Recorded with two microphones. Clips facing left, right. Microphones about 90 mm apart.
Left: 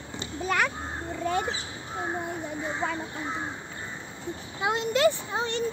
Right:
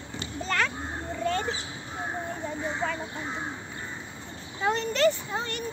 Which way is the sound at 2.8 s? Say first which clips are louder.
Even; 10° left (ahead or behind).